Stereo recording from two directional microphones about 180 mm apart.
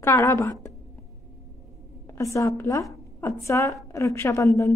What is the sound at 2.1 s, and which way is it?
A woman's voice, 15° left (ahead or behind).